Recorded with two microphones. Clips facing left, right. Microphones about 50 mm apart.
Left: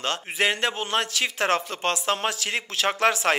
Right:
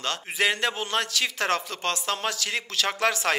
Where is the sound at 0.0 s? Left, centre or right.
Centre.